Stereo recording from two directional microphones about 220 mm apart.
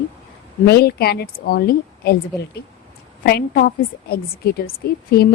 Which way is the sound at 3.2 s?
45° left (ahead or behind).